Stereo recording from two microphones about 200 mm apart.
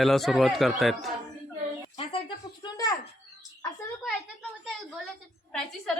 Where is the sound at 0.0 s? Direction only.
Centre (ahead or behind).